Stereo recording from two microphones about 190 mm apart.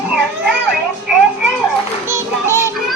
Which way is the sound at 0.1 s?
5° right (ahead or behind).